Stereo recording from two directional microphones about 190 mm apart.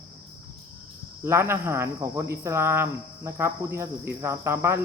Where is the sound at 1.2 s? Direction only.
15° right (ahead or behind).